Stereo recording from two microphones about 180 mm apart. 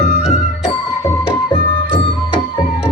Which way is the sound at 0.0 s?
40° left (ahead or behind).